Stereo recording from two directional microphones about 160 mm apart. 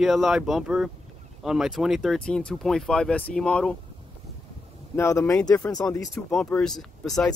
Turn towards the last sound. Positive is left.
turn(degrees=0)  # may be behind; listen again after turning